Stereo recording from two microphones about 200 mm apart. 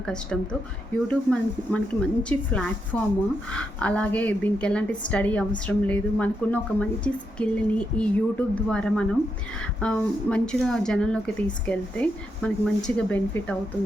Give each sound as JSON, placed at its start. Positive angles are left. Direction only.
{"t": 0.0, "sound": "a woman's voice", "side_deg": 5}